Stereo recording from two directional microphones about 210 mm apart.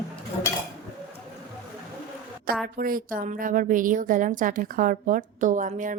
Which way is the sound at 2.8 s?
45° right (ahead or behind).